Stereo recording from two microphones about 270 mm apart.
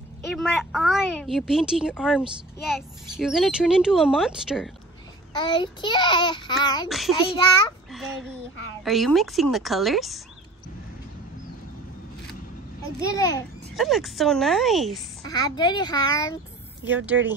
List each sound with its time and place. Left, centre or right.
0.2 s a woman's voice: centre
5.4 s child singing: centre
6.9 s a woman's voice: centre
13.1 s child singing: centre
13.7 s a woman's voice: centre
15.2 s child singing: centre
16.9 s a woman's voice: centre